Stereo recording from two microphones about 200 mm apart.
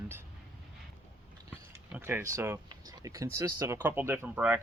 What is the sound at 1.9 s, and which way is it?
Speech, 10° right (ahead or behind).